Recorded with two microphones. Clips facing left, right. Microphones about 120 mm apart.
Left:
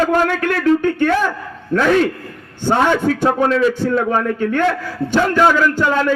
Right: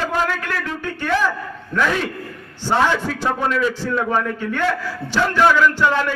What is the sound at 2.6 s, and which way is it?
Speech, 50° left (ahead or behind).